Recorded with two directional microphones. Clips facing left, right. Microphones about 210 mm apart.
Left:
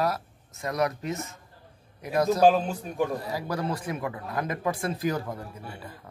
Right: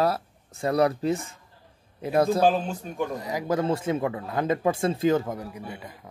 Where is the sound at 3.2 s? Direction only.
20° right (ahead or behind).